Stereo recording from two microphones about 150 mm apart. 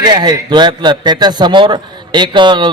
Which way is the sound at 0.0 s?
30° right (ahead or behind).